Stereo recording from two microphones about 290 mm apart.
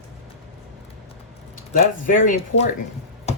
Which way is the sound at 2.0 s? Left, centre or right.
Left.